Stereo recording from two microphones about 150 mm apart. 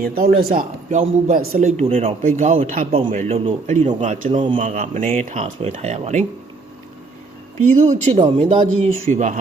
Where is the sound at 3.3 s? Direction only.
40° right (ahead or behind); by 5.1 s 60° right (ahead or behind).